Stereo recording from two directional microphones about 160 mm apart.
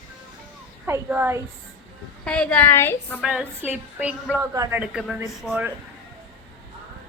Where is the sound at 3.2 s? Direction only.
5° right (ahead or behind).